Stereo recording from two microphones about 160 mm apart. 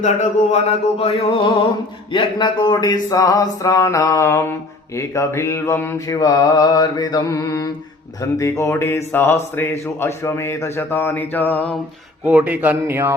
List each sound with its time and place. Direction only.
0.0 s a sound: 45° left (ahead or behind)
2.1 s mantra: 30° left (ahead or behind)
8.2 s speech: 20° left (ahead or behind)
12.2 s speech: 10° right (ahead or behind)